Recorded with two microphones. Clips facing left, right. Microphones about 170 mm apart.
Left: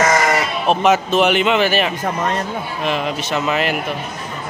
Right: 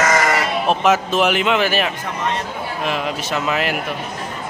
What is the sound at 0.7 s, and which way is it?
A man's voice, centre (ahead or behind).